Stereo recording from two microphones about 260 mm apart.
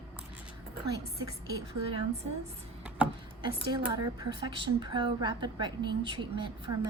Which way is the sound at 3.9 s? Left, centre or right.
Centre.